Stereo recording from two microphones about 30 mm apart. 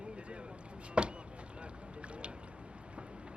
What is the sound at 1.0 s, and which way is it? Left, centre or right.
Chop, right.